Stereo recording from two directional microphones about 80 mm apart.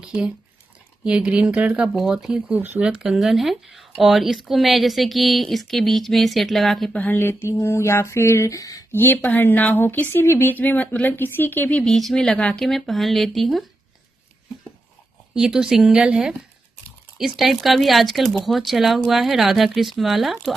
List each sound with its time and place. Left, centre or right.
0.0 s squish: centre
1.0 s speech: centre
2.0 s speech: centre
6.9 s mantra: left
8.9 s speech: left
11.8 s speech: centre
15.3 s speech: centre